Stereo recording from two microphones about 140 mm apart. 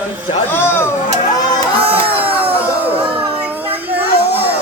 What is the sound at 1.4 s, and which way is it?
Music, 30° left (ahead or behind).